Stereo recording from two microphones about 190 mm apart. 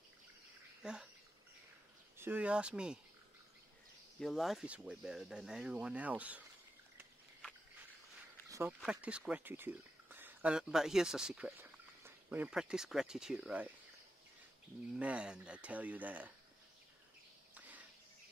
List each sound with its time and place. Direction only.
0.8 s speech: 5° right (ahead or behind)
2.1 s speech: 10° right (ahead or behind)
4.2 s speech: centre (ahead or behind)
8.5 s a sound: 15° right (ahead or behind)
8.8 s speech: 5° right (ahead or behind)
15.0 s speech: 5° right (ahead or behind)
17.6 s a sound: 10° right (ahead or behind)